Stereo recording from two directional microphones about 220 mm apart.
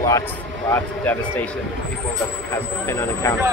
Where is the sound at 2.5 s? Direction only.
10° left (ahead or behind).